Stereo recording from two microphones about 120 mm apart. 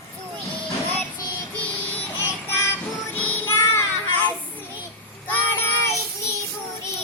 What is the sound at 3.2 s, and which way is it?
Music, 20° left (ahead or behind).